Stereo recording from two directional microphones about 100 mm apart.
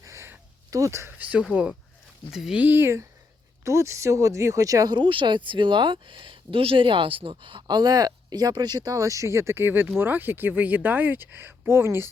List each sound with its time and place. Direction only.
0.0 s a sound: 30° right (ahead or behind)
1.2 s speech: 10° right (ahead or behind)
2.6 s speech: 20° right (ahead or behind)